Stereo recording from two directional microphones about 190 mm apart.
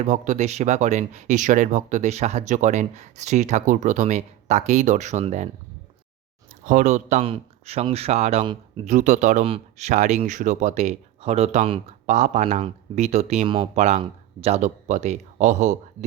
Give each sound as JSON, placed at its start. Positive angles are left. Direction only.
{"t": 0.0, "sound": "speech", "side_deg": -40}
{"t": 6.7, "sound": "speech", "side_deg": -40}